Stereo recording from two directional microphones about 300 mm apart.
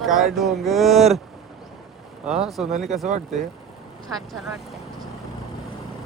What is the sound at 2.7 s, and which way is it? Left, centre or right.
Speech, right.